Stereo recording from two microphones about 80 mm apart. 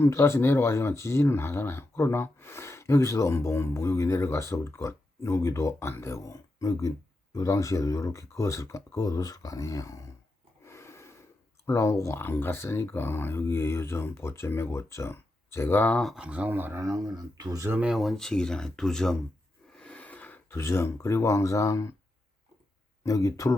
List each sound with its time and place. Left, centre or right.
0.0 s speech: left
10.6 s snort: left
11.6 s speech: left
16.1 s speech: centre
16.8 s speech: right
17.8 s speech: centre
19.7 s a sound: centre
20.6 s speech: left
23.0 s speech: left